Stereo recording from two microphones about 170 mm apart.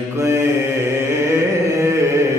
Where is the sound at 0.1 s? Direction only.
15° right (ahead or behind).